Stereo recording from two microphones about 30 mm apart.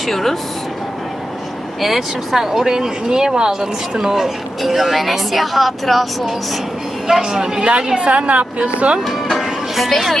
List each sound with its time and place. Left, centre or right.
0.0 s speech: centre
1.8 s speech: centre
4.6 s speech: centre
7.1 s speech: centre
8.0 s speech: right
9.3 s music: centre